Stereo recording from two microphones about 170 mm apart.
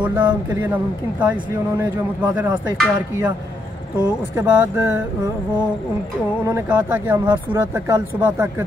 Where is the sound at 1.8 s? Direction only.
10° right (ahead or behind).